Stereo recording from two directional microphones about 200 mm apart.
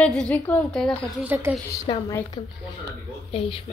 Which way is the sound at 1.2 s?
10° right (ahead or behind).